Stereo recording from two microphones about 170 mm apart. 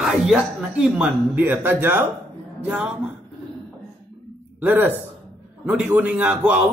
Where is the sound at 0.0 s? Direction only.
5° right (ahead or behind).